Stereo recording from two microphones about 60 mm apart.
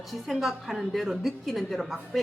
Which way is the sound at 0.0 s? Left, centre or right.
Centre.